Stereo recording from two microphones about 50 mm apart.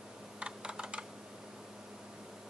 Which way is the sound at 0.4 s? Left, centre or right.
Centre.